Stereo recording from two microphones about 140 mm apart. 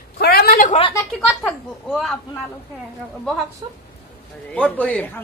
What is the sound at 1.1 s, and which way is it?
A woman's voice, 5° left (ahead or behind).